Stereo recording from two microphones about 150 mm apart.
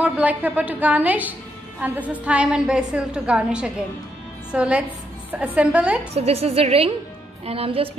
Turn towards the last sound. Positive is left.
turn(degrees=-40)  # may be behind; listen again after turning